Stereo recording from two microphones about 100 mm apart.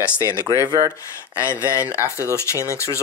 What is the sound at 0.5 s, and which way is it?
Speech, 35° left (ahead or behind).